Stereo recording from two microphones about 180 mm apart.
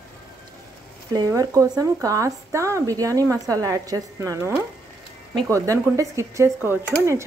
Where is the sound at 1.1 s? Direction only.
20° right (ahead or behind).